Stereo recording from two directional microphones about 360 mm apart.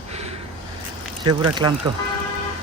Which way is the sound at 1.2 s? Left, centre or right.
Centre.